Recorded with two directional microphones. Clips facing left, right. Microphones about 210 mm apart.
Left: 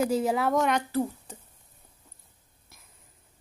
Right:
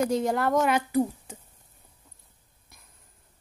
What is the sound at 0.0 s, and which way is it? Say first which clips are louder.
Speech: even; 5° left (ahead or behind).